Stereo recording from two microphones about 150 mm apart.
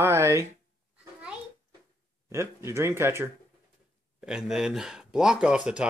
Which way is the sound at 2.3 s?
20° right (ahead or behind).